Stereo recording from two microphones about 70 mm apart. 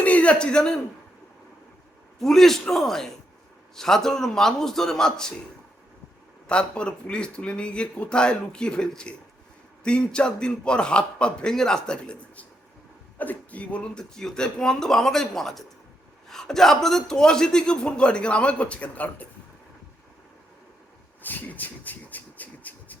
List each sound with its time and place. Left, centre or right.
0.0 s a man's voice: centre
2.2 s a man's voice: centre
6.5 s a man's voice: centre
21.2 s a sound: left